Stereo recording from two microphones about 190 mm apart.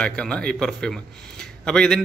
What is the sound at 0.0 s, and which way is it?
A man's voice, 5° left (ahead or behind).